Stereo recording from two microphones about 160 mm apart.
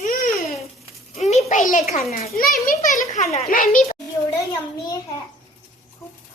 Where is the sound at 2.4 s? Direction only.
60° left (ahead or behind).